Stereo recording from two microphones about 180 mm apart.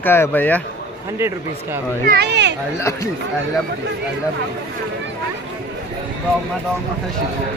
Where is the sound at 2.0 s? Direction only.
65° right (ahead or behind).